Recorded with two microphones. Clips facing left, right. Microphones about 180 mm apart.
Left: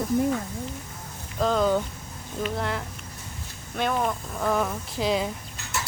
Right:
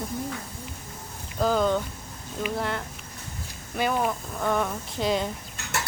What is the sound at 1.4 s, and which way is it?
Speech, centre (ahead or behind).